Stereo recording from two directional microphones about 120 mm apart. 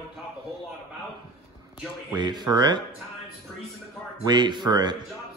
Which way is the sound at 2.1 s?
35° right (ahead or behind).